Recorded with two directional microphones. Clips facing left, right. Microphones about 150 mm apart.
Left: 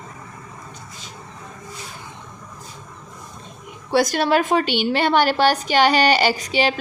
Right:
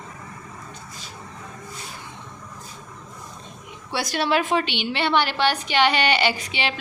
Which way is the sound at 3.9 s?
45° left (ahead or behind).